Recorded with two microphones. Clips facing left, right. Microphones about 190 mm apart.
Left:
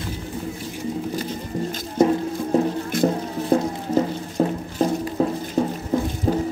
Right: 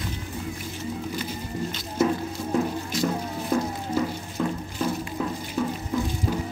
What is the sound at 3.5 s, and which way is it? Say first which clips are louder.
Music: left 6 dB; 40° left (ahead or behind).